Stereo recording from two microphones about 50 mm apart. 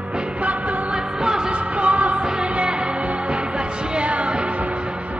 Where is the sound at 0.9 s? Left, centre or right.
Centre.